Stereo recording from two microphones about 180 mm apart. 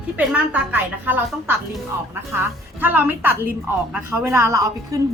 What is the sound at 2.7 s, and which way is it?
A woman's voice, 10° right (ahead or behind).